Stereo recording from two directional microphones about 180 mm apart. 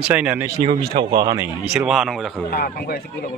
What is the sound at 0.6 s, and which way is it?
Speech, 30° right (ahead or behind).